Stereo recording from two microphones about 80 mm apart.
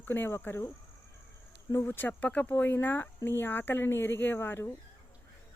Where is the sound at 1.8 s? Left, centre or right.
Left.